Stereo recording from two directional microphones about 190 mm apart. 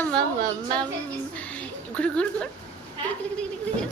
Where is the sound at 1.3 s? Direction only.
5° left (ahead or behind).